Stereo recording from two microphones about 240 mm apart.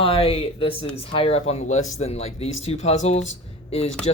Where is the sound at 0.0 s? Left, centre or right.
Left.